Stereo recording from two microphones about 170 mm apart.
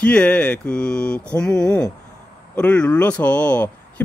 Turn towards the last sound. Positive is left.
turn(degrees=10)  # may be behind; listen again after turning